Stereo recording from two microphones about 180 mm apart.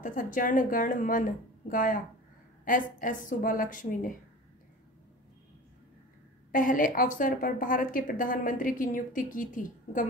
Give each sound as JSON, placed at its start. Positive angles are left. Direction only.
{"t": 0.0, "sound": "a woman's voice", "side_deg": 50}
{"t": 6.5, "sound": "a woman's voice", "side_deg": 50}